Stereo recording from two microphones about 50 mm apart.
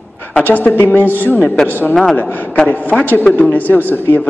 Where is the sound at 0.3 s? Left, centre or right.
Left.